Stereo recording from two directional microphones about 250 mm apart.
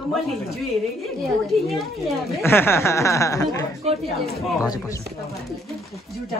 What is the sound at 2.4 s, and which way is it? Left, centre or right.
Speech, centre.